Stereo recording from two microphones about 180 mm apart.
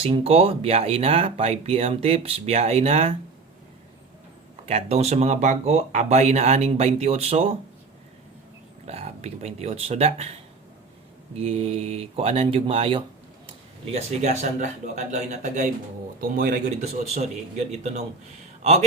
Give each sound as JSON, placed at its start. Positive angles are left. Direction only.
{"t": 0.0, "sound": "speech", "side_deg": -35}
{"t": 4.6, "sound": "speech", "side_deg": -35}
{"t": 8.9, "sound": "speech", "side_deg": -35}
{"t": 11.3, "sound": "speech", "side_deg": -35}
{"t": 16.3, "sound": "speech", "side_deg": -50}
{"t": 16.8, "sound": "speech", "side_deg": -40}